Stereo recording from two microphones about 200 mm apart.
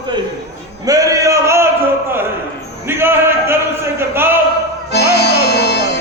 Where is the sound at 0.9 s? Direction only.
15° right (ahead or behind).